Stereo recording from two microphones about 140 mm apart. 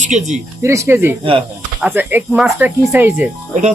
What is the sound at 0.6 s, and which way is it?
Speech, 20° right (ahead or behind).